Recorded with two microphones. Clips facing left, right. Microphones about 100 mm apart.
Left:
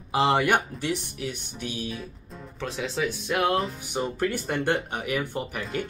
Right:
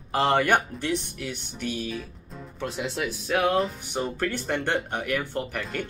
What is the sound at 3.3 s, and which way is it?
Speech, centre (ahead or behind).